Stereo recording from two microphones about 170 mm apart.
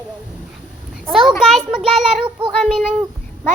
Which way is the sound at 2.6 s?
Centre (ahead or behind).